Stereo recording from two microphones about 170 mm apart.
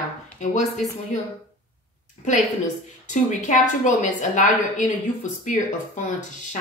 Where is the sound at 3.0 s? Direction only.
50° left (ahead or behind).